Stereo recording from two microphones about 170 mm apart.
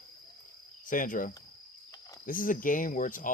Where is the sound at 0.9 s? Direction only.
50° left (ahead or behind).